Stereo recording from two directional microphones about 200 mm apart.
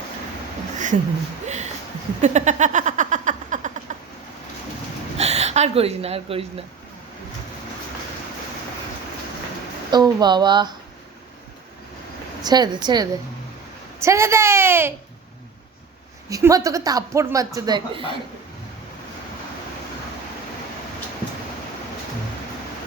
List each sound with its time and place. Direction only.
1.5 s a sound: 35° right (ahead or behind)
5.1 s gasp: 30° right (ahead or behind)
9.9 s speech: 20° right (ahead or behind)
12.4 s a woman's voice: 20° right (ahead or behind)
16.3 s a woman's voice: 15° right (ahead or behind)